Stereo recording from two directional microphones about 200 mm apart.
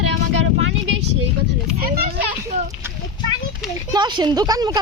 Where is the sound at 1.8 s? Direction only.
50° right (ahead or behind).